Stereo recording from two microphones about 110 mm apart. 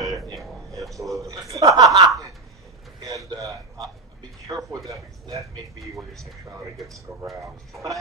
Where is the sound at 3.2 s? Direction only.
30° right (ahead or behind).